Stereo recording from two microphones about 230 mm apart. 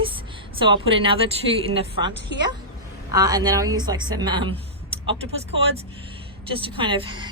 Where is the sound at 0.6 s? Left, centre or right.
Right.